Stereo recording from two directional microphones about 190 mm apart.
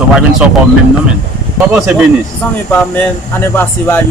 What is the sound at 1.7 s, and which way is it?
Speech, 5° right (ahead or behind).